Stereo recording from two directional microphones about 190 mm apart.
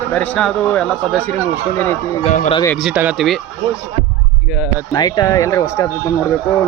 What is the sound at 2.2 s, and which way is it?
Speech, 40° left (ahead or behind).